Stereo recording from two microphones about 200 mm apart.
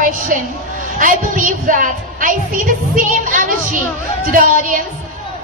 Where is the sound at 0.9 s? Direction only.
40° right (ahead or behind).